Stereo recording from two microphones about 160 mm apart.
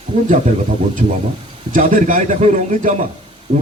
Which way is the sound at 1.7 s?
55° right (ahead or behind).